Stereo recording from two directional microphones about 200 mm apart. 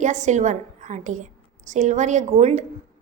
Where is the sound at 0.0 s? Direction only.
35° right (ahead or behind).